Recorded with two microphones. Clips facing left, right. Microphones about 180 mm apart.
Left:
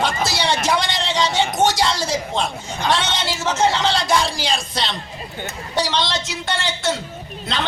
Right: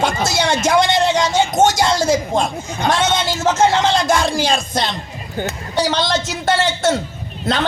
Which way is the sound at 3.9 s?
50° right (ahead or behind).